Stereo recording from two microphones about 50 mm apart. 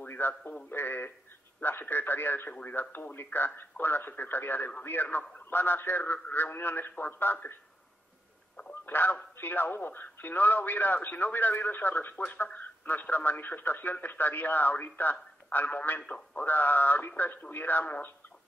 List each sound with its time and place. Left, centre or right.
0.0 s a sound: left
0.7 s speech: left
8.8 s a man's voice: left